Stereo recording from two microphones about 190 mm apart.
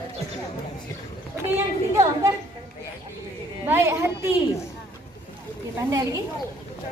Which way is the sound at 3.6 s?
15° right (ahead or behind).